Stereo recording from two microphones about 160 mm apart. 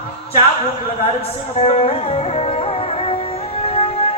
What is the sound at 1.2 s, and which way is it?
Music, 40° left (ahead or behind).